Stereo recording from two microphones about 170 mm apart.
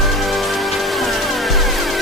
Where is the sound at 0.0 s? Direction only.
Centre (ahead or behind).